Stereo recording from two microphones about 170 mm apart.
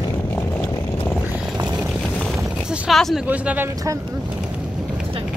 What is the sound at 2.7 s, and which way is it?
Speech, centre (ahead or behind).